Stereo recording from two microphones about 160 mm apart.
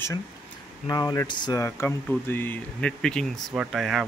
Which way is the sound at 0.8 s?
25° left (ahead or behind).